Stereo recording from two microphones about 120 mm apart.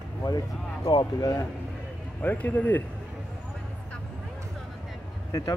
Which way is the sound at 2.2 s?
15° left (ahead or behind).